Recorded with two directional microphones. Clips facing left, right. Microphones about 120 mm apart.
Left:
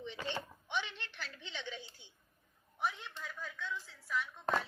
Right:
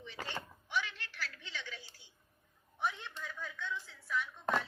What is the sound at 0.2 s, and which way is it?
Speech, 45° right (ahead or behind).